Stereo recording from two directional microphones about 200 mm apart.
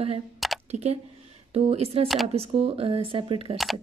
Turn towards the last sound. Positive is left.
turn(degrees=-25)  # may be behind; listen again after turning